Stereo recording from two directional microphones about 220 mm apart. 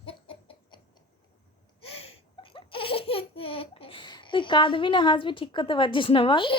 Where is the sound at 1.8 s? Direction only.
25° left (ahead or behind).